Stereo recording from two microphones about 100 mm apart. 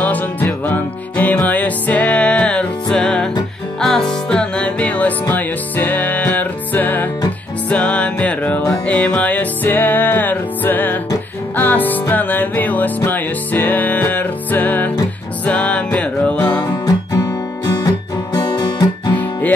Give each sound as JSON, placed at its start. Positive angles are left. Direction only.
{"t": 0.0, "sound": "music", "side_deg": 15}
{"t": 17.6, "sound": "guitar", "side_deg": 40}